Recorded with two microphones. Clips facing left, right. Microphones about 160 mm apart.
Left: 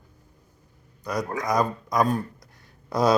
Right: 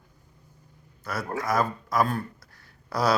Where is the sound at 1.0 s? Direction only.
15° left (ahead or behind).